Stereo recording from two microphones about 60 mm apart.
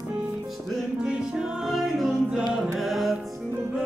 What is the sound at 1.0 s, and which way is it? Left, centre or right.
Music, centre.